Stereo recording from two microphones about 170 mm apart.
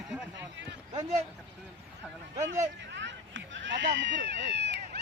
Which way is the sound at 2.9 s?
90° right.